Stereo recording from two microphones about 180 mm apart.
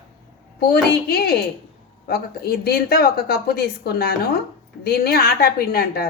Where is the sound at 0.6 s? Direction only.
60° left (ahead or behind).